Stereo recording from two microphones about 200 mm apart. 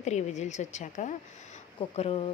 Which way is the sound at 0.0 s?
35° left (ahead or behind).